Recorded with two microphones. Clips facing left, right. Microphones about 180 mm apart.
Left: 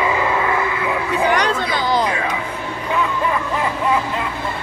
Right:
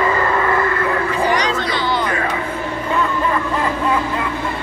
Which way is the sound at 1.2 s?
55° left (ahead or behind).